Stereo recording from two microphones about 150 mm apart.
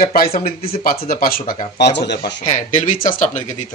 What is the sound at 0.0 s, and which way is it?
Speech, 85° left.